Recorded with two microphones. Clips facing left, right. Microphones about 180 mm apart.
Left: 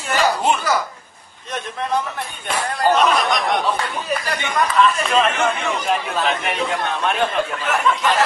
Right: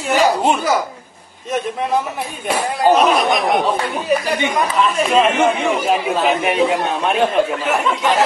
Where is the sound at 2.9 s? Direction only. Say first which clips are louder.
Right 3 dB; 5° right (ahead or behind).